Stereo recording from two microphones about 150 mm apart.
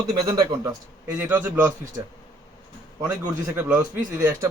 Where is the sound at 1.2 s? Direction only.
15° right (ahead or behind).